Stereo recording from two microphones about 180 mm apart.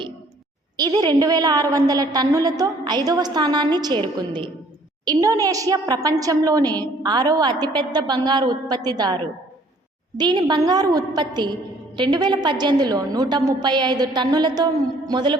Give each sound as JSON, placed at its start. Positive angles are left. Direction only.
{"t": 0.8, "sound": "a woman's voice", "side_deg": -20}
{"t": 5.0, "sound": "a woman's voice", "side_deg": -20}